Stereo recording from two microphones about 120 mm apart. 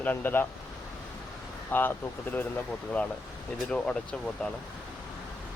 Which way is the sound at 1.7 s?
15° left (ahead or behind).